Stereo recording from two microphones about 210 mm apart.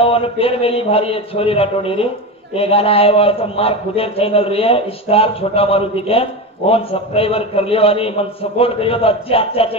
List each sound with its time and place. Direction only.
0.0 s a man's voice: 25° left (ahead or behind)